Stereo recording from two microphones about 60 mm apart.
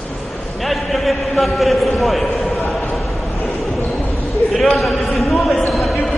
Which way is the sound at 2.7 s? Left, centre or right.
Centre.